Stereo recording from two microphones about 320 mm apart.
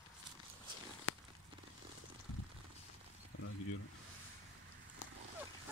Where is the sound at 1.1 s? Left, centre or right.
Left.